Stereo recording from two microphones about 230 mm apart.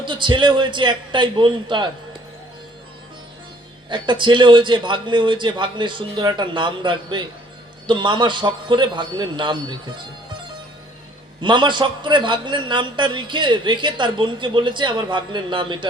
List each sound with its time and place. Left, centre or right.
0.0 s a man's voice: right
3.8 s a man's voice: centre
11.3 s a man's voice: centre